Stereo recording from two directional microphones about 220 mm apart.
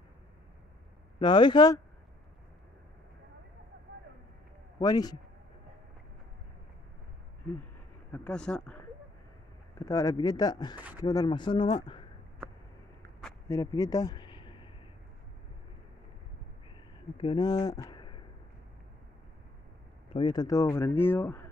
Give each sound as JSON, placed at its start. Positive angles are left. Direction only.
{"t": 1.2, "sound": "speech", "side_deg": 20}
{"t": 4.7, "sound": "speech", "side_deg": 20}
{"t": 8.1, "sound": "speech", "side_deg": 5}
{"t": 9.8, "sound": "speech", "side_deg": 15}
{"t": 13.2, "sound": "a sound", "side_deg": 15}
{"t": 17.2, "sound": "speech", "side_deg": 20}
{"t": 20.2, "sound": "speech", "side_deg": 20}